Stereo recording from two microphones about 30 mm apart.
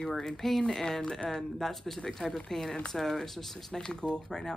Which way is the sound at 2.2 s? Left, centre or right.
Left.